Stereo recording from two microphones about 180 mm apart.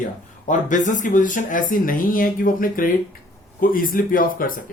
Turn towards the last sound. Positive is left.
turn(degrees=50)  # may be behind; listen again after turning